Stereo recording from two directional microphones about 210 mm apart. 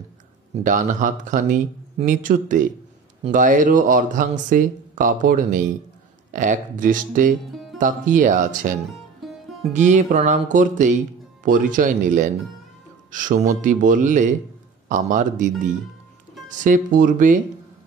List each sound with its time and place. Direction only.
0.7 s speech: 40° right (ahead or behind)
9.2 s music: centre (ahead or behind)
9.8 s speech: 35° right (ahead or behind)